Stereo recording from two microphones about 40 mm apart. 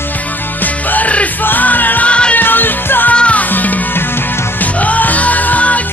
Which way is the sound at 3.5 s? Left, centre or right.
Left.